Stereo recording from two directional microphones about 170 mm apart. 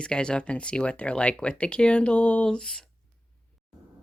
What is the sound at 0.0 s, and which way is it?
Speech, 5° left (ahead or behind).